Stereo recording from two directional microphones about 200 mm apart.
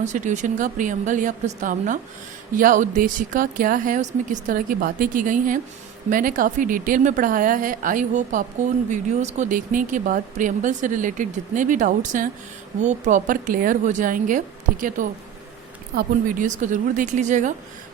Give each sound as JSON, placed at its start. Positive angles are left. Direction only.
{"t": 0.0, "sound": "a woman's voice", "side_deg": -35}